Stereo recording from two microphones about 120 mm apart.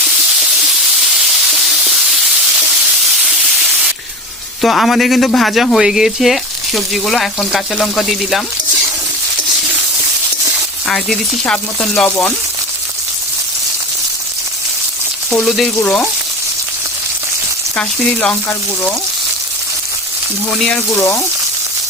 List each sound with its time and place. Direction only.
1.5 s sizzle: 5° right (ahead or behind)
4.6 s speech: centre (ahead or behind)
10.8 s frying: 5° left (ahead or behind)
15.3 s speech: 5° left (ahead or behind)
15.8 s frying: 15° left (ahead or behind)
17.7 s frying: 10° left (ahead or behind)
20.9 s speech: 25° left (ahead or behind)